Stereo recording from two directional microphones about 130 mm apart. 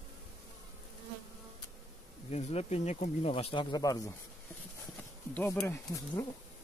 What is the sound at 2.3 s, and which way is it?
Speech, 55° left (ahead or behind).